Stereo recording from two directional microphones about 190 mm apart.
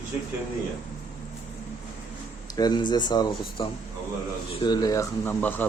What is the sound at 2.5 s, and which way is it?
Speech, 20° left (ahead or behind).